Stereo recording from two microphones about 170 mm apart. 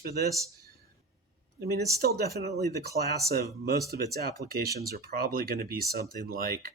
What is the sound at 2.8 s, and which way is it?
Speech, 70° right (ahead or behind).